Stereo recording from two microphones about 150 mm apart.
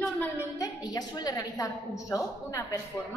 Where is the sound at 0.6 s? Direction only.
25° left (ahead or behind).